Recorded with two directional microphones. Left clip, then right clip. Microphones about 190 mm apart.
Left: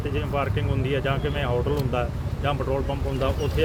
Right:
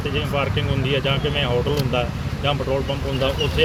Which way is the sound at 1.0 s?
5° left (ahead or behind).